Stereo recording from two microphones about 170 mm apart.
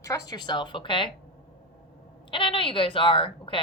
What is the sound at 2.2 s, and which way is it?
A woman's voice, 30° left (ahead or behind).